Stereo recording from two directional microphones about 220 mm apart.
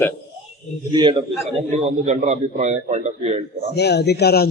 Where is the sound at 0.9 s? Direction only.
20° right (ahead or behind).